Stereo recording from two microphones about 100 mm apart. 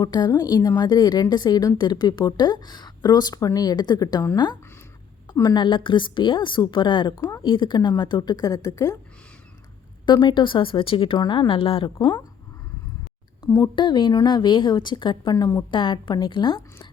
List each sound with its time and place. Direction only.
0.0 s a woman's voice: 45° left (ahead or behind)
5.5 s speech: 55° left (ahead or behind)
7.2 s speech: 25° left (ahead or behind)
7.4 s speech: 55° left (ahead or behind); by 9.0 s 35° left (ahead or behind)
10.1 s speech: 50° left (ahead or behind)
13.7 s speech: 50° left (ahead or behind)
15.3 s a woman's voice: 35° left (ahead or behind)
15.7 s speech: 55° left (ahead or behind)